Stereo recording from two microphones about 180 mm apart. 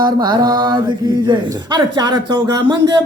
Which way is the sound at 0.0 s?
25° right (ahead or behind).